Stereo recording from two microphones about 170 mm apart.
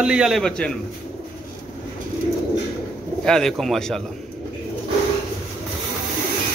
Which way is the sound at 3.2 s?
5° left (ahead or behind).